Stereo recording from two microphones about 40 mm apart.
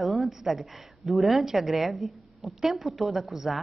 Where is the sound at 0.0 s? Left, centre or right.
Centre.